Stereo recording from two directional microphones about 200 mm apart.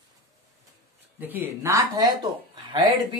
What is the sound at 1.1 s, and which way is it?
Speech, 10° right (ahead or behind).